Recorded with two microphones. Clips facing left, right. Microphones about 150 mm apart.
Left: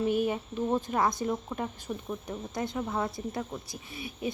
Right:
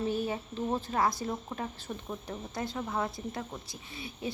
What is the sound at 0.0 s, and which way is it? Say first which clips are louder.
A woman's voice: left 4 dB; 15° left (ahead or behind).